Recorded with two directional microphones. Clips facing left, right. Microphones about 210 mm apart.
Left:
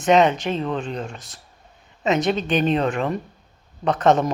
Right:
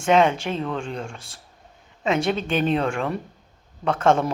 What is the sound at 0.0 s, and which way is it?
Speech, 10° right (ahead or behind).